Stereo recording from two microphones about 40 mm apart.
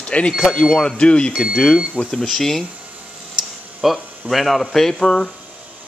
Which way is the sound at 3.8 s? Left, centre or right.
Centre.